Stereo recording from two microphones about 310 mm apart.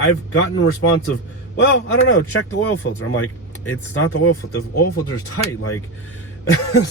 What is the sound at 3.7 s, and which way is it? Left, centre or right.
Speech, left.